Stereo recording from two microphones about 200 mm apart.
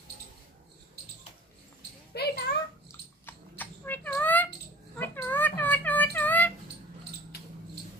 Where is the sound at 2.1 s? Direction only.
55° left (ahead or behind).